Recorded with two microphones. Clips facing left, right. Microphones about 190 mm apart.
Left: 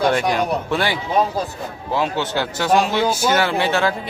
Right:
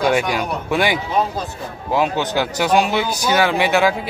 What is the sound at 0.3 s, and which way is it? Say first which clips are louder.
Speech: left 1 dB; 10° right (ahead or behind).